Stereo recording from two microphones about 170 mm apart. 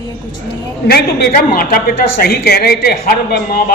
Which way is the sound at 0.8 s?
70° left (ahead or behind).